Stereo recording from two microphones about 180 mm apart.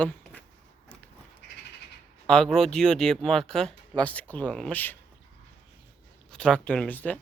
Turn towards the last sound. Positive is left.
turn(degrees=10)  # may be behind; listen again after turning